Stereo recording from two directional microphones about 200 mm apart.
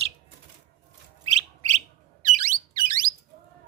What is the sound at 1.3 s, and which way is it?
Bird, 35° right (ahead or behind).